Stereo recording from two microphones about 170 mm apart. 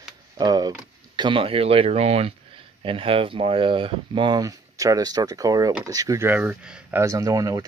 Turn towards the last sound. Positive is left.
turn(degrees=-20)  # may be behind; listen again after turning